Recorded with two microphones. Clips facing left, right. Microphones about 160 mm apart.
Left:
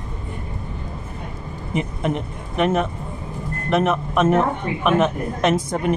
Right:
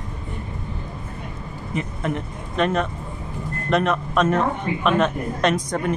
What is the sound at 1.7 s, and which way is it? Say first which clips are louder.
A woman's voice: left 3 dB; 15° left (ahead or behind).